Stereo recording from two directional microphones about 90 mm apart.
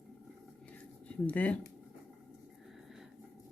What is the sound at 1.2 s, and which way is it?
Speech, 15° left (ahead or behind).